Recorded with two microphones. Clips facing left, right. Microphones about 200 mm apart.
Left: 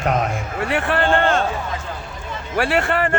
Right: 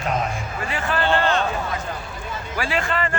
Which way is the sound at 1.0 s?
50° left (ahead or behind).